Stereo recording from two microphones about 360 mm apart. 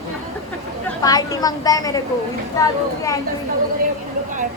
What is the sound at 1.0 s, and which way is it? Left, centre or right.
A woman's voice, centre.